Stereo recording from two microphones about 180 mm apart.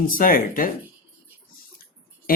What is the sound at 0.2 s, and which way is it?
Speech, 50° left (ahead or behind).